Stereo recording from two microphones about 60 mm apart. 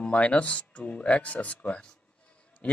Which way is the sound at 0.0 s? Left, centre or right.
Left.